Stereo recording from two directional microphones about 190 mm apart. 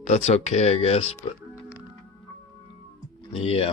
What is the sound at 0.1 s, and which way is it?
Speech, 35° left (ahead or behind).